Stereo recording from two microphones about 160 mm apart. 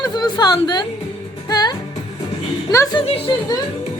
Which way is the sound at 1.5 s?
25° left (ahead or behind).